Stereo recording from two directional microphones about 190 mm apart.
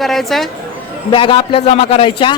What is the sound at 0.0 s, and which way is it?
Speech, centre (ahead or behind).